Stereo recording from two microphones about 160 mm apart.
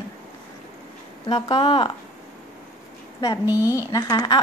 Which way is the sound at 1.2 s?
30° left (ahead or behind).